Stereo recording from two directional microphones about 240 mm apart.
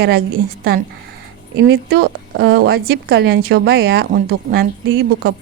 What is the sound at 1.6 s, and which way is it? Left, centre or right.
A woman's voice, right.